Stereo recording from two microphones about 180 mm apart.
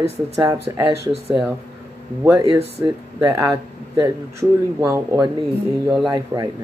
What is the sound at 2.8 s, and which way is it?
Speech, 20° right (ahead or behind).